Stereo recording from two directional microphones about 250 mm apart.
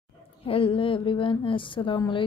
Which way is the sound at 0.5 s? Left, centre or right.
Left.